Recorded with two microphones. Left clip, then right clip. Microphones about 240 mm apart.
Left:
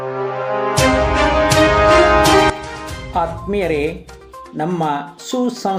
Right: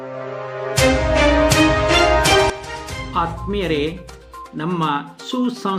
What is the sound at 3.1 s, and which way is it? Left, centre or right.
Speech, centre.